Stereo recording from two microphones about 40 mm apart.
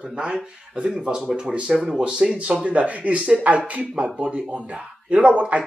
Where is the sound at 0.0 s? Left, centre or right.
Right.